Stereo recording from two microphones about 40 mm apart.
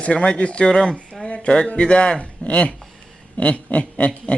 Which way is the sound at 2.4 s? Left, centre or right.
Left.